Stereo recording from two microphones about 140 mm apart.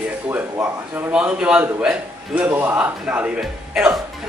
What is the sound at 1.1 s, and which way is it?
A man's voice, 5° right (ahead or behind).